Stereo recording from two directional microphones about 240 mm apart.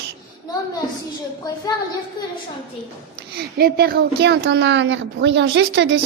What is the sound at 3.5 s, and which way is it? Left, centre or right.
A woman's voice, right.